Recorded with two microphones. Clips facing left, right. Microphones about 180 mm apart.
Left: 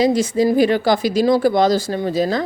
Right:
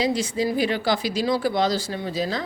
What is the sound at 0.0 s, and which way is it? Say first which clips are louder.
Speech: left 7 dB; 45° left (ahead or behind).